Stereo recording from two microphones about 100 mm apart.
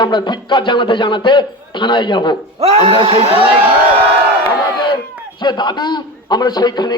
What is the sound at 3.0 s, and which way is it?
Speech, 80° right.